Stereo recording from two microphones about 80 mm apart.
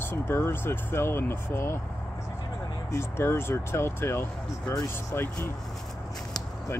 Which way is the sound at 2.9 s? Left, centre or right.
Left.